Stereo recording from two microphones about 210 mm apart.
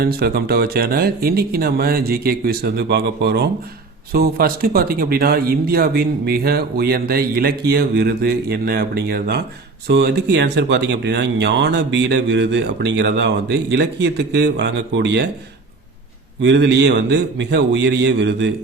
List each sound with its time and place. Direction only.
0.0 s speech: 50° right (ahead or behind)
16.4 s speech: 55° right (ahead or behind)